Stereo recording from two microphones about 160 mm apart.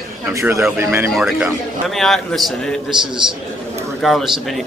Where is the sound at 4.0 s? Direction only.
Centre (ahead or behind).